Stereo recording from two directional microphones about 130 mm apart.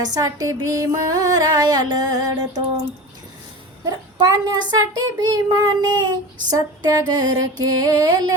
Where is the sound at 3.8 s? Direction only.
30° right (ahead or behind).